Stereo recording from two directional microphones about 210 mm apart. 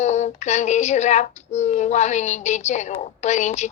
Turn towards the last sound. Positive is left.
turn(degrees=35)  # may be behind; listen again after turning